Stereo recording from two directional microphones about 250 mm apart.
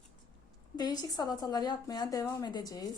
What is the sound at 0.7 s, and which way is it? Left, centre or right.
A woman's voice, centre.